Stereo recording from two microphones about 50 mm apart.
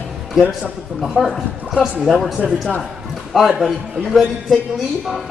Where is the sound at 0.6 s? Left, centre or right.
Centre.